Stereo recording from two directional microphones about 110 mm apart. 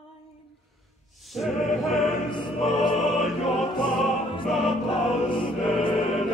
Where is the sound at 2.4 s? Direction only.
Centre (ahead or behind).